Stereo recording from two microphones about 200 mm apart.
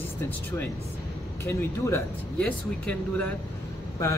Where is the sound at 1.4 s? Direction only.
15° left (ahead or behind).